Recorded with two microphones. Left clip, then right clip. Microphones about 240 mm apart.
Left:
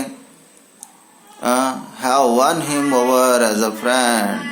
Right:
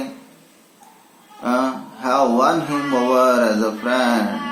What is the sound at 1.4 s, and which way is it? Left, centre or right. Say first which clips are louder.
A man's voice: left 3 dB; left.